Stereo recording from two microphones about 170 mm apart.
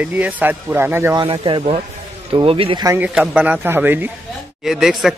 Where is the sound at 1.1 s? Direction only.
30° right (ahead or behind).